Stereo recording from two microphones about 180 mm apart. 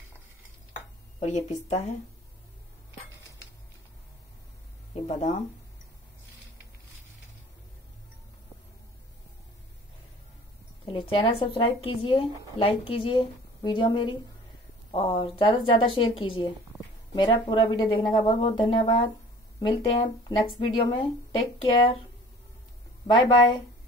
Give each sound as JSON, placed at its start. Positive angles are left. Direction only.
{"t": 1.2, "sound": "a woman's voice", "side_deg": 40}
{"t": 4.9, "sound": "speech", "side_deg": 35}
{"t": 10.9, "sound": "speech", "side_deg": 30}
{"t": 23.1, "sound": "speech", "side_deg": 25}